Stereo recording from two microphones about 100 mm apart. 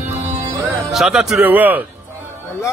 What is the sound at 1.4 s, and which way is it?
Speech, 15° right (ahead or behind).